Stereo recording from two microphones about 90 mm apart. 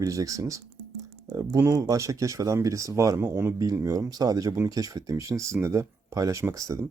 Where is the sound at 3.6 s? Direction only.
40° right (ahead or behind).